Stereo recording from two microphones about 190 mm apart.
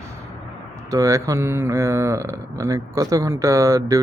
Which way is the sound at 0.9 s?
15° right (ahead or behind).